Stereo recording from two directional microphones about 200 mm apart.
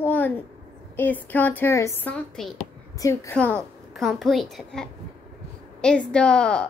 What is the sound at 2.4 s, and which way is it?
Speech, centre (ahead or behind).